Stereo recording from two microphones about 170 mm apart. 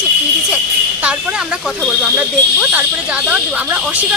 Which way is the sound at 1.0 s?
5° right (ahead or behind).